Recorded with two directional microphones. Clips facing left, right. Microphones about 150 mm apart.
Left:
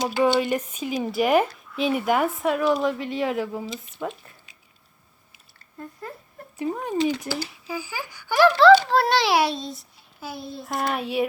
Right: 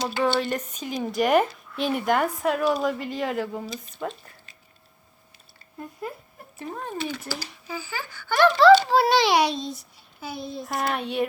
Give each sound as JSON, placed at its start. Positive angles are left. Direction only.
{"t": 0.0, "sound": "a child's voice", "side_deg": 15}
{"t": 5.8, "sound": "dog", "side_deg": -15}
{"t": 6.6, "sound": "a child's voice", "side_deg": 15}